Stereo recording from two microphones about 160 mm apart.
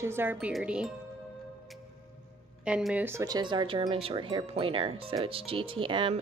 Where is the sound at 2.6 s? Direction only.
5° right (ahead or behind).